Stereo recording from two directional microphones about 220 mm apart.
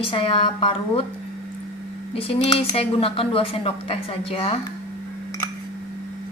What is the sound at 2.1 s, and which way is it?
Speech, 25° left (ahead or behind).